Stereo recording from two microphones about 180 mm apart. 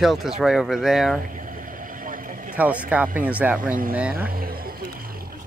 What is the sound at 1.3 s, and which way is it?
Vehicle, 50° right (ahead or behind).